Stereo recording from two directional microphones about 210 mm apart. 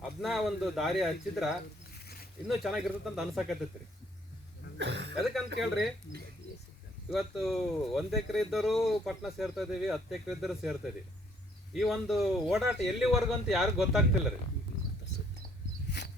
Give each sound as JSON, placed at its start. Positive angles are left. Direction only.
{"t": 0.2, "sound": "speech", "side_deg": 0}
{"t": 4.8, "sound": "speech", "side_deg": -55}
{"t": 5.5, "sound": "speech", "side_deg": 0}
{"t": 7.1, "sound": "speech", "side_deg": 0}
{"t": 15.9, "sound": "a sound", "side_deg": 50}